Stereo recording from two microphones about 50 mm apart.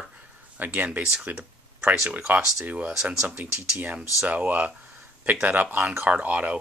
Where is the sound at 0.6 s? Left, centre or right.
Right.